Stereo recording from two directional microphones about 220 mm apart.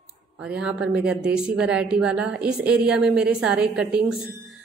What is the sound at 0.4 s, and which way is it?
A woman's voice, 5° right (ahead or behind).